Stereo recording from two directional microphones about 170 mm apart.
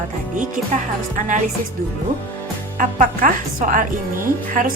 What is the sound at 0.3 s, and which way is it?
A woman's voice, 50° right (ahead or behind).